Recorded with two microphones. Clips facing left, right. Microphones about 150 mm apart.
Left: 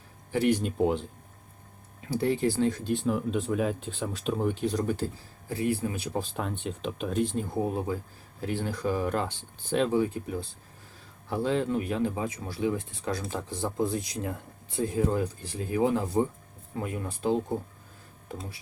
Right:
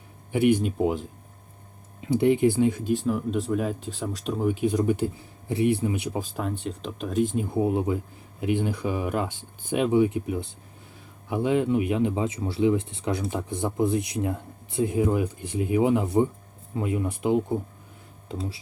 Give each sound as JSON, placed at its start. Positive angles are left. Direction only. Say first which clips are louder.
{"t": 0.6, "sound": "speech", "louder": "right 1 dB", "side_deg": -5}
{"t": 2.0, "sound": "speech", "louder": "right 6 dB", "side_deg": -20}
{"t": 3.1, "sound": "speech", "louder": "right 2 dB", "side_deg": 0}
{"t": 6.6, "sound": "speech", "louder": "right 1 dB", "side_deg": 0}
{"t": 7.3, "sound": "speech", "louder": "right 5 dB", "side_deg": -20}
{"t": 18.3, "sound": "speech", "louder": "right 6 dB", "side_deg": -30}